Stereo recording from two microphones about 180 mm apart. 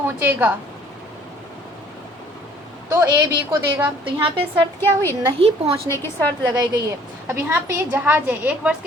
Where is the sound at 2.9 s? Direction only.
20° right (ahead or behind).